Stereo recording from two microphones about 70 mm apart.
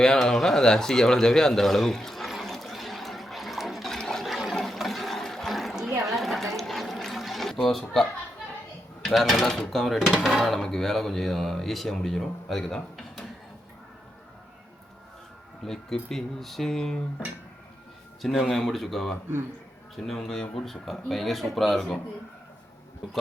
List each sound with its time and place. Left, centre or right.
0.0 s a sound: centre
4.5 s water: centre
9.0 s speech: centre
15.6 s speech: centre